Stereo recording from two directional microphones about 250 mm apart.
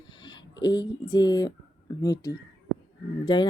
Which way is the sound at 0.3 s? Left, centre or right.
Centre.